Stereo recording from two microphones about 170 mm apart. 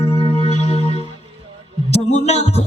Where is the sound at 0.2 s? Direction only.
35° left (ahead or behind).